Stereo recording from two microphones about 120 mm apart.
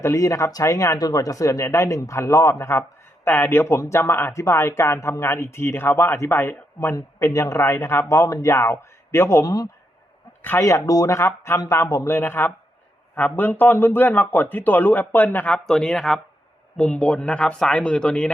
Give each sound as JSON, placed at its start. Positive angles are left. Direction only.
{"t": 0.0, "sound": "a man's voice", "side_deg": 25}